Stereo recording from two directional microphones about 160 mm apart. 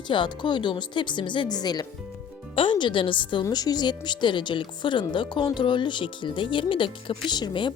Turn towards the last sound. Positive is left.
turn(degrees=30)  # may be behind; listen again after turning